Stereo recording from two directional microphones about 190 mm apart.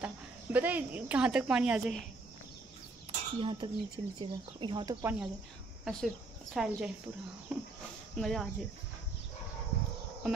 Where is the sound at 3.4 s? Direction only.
25° right (ahead or behind).